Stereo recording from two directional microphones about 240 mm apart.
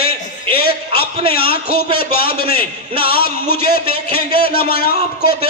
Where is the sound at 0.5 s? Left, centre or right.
Left.